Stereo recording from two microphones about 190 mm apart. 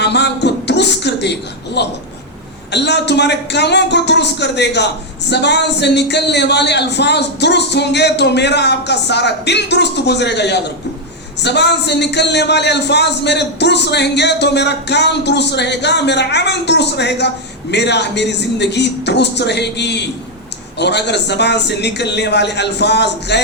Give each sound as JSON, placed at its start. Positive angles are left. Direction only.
{"t": 0.0, "sound": "a man's voice", "side_deg": 60}